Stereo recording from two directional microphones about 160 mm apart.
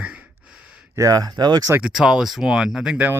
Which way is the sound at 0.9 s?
20° right (ahead or behind).